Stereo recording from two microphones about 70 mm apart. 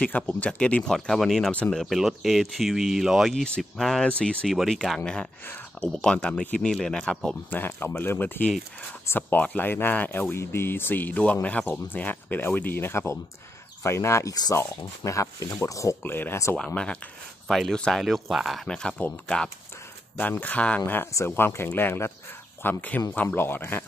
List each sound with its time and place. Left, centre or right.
0.0 s speech: centre
0.8 s speech: centre
1.5 s speech: centre
1.8 s speech: centre
3.4 s speech: centre
7.5 s speech: left
9.4 s speech: left
10.3 s speech: left
16.0 s speech: left
16.5 s speech: centre
18.0 s speech: centre
18.7 s speech: centre
20.8 s speech: left